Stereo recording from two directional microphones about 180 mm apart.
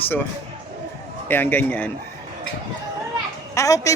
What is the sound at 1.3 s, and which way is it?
Speech, 10° left (ahead or behind).